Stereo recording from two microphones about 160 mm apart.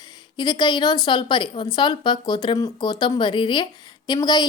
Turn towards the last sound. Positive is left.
turn(degrees=25)  # may be behind; listen again after turning